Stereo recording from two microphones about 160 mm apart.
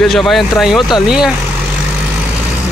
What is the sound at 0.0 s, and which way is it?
Speech, centre (ahead or behind).